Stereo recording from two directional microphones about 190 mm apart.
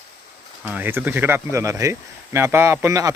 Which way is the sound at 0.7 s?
10° right (ahead or behind).